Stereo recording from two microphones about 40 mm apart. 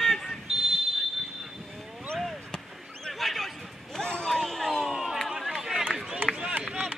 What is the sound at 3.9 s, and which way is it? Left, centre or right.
Basketball bounce, centre.